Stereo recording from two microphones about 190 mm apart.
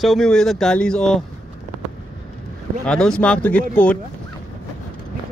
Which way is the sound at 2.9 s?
5° left (ahead or behind).